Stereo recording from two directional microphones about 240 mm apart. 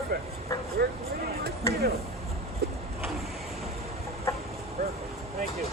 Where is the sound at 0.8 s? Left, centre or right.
Right.